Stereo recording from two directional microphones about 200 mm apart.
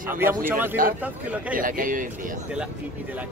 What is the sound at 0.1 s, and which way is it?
Speech, 10° right (ahead or behind).